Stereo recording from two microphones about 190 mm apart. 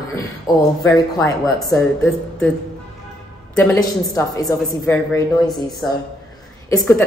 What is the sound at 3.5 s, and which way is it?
A woman's voice, 10° left (ahead or behind).